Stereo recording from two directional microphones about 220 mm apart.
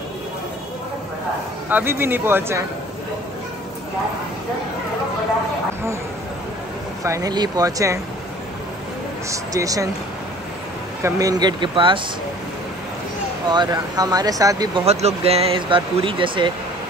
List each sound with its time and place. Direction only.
1.7 s speech: 10° right (ahead or behind)
7.0 s speech: 15° right (ahead or behind)
9.3 s speech: 15° right (ahead or behind)
11.0 s speech: 15° right (ahead or behind)
13.5 s speech: 20° right (ahead or behind)
14.9 s speech: 30° right (ahead or behind)